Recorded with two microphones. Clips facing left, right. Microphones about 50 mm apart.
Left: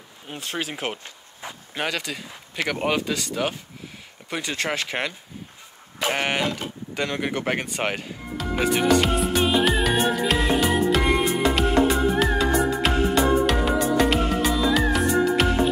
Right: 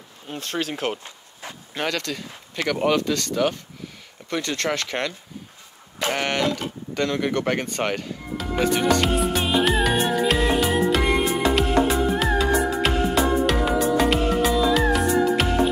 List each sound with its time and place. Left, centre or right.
0.3 s speech: centre
5.9 s a sound: centre
6.9 s speech: centre
8.4 s music: centre